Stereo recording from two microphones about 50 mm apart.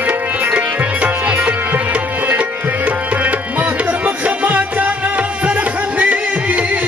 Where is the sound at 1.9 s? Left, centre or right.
Right.